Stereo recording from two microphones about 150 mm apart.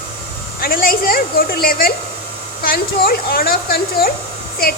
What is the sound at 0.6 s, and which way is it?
A woman's voice, 75° left (ahead or behind).